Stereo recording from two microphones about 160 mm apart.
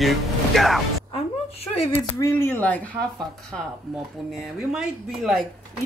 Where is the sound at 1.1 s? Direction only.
40° left (ahead or behind).